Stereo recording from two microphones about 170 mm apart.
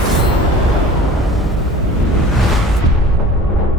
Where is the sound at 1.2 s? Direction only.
Centre (ahead or behind).